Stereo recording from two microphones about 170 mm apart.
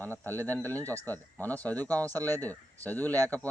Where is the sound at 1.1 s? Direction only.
10° left (ahead or behind).